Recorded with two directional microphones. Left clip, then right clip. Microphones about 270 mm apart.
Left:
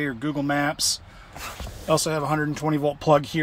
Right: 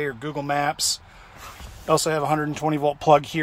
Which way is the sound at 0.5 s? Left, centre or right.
Centre.